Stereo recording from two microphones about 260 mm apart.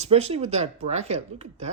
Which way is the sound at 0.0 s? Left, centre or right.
Right.